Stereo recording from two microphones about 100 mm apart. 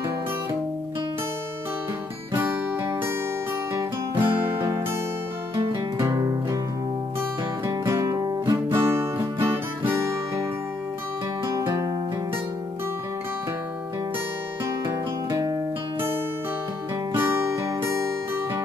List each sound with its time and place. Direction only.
2.3 s music: 25° right (ahead or behind)
4.2 s music: 25° right (ahead or behind)
5.9 s music: 35° right (ahead or behind)
8.7 s music: 25° right (ahead or behind)
11.4 s music: 30° right (ahead or behind)
15.2 s music: 40° right (ahead or behind)
17.1 s music: 25° right (ahead or behind)